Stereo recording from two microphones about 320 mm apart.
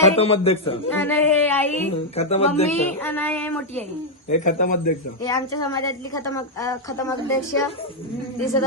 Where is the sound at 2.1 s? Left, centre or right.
Centre.